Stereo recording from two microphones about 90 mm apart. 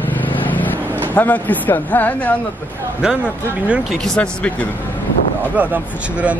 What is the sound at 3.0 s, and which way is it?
Speech, 15° right (ahead or behind).